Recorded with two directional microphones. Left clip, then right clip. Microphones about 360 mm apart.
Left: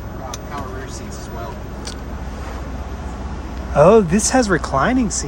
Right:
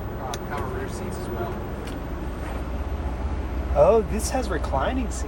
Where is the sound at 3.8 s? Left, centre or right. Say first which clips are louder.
Left 7 dB; left.